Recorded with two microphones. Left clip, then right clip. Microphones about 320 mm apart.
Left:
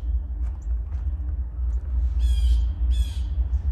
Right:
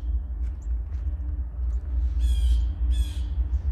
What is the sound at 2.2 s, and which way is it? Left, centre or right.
Squawk, left.